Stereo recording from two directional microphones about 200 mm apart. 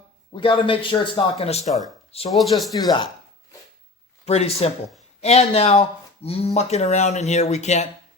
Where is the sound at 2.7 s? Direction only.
20° left (ahead or behind).